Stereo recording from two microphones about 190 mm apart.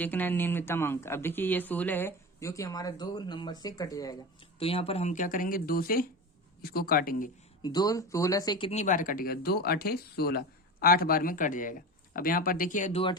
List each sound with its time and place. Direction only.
0.0 s speech: 10° left (ahead or behind); by 7.3 s 50° left (ahead or behind)
7.6 s speech: 20° left (ahead or behind); by 13.0 s 40° left (ahead or behind)